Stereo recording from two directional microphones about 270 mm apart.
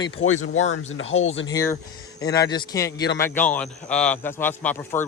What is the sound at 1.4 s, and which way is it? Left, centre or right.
A man's voice, centre.